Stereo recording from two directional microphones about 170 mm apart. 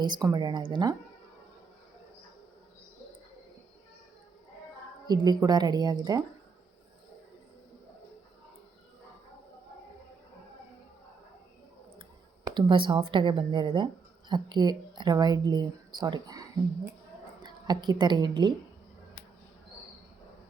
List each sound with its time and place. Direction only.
0.0 s speech: 25° right (ahead or behind)
5.0 s speech: 25° right (ahead or behind)
12.5 s a woman's voice: 25° right (ahead or behind)